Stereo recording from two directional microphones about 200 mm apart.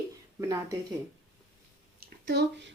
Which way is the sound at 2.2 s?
55° right (ahead or behind).